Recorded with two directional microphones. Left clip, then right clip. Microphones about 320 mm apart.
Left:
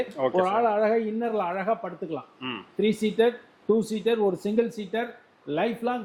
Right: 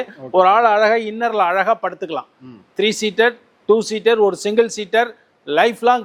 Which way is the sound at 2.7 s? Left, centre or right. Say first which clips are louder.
Right 8 dB; centre.